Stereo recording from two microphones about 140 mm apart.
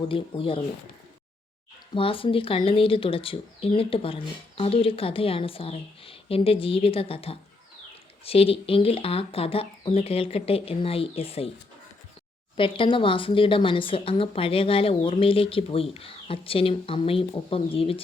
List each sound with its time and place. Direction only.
0.1 s speech: 40° left (ahead or behind)
1.9 s speech: 40° left (ahead or behind)
12.5 s speech: 40° left (ahead or behind)